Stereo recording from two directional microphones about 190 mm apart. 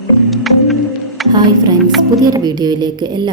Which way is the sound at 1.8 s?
Centre (ahead or behind).